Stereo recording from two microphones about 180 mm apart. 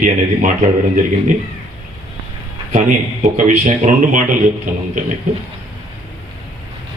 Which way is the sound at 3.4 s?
40° right (ahead or behind).